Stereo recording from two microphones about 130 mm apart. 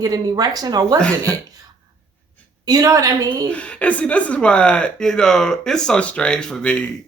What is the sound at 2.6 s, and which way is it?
Speech, 30° right (ahead or behind).